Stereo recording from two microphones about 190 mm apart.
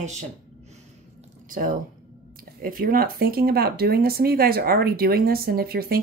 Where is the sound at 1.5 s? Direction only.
50° right (ahead or behind).